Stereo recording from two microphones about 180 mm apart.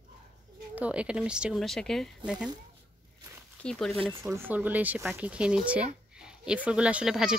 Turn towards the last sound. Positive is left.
turn(degrees=-5)  # may be behind; listen again after turning